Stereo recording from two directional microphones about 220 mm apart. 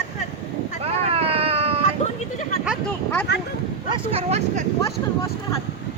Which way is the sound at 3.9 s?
30° right (ahead or behind).